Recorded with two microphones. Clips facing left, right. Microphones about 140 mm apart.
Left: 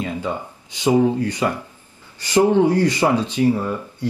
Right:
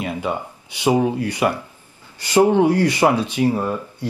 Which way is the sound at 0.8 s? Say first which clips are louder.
Left 1 dB; 15° right (ahead or behind).